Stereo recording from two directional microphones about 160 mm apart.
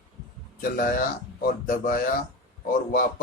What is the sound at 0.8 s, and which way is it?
A man's voice, 65° left (ahead or behind).